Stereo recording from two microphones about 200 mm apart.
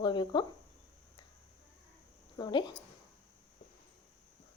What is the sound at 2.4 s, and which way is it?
Speech, 20° left (ahead or behind).